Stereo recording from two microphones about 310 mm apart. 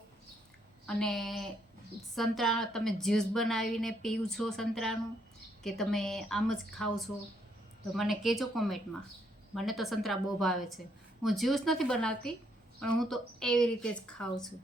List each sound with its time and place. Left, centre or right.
0.9 s a woman's voice: centre